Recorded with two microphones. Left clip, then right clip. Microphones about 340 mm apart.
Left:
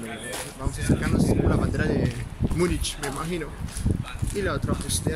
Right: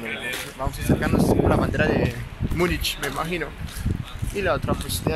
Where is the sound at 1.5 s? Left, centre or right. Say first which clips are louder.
Right 5 dB; centre.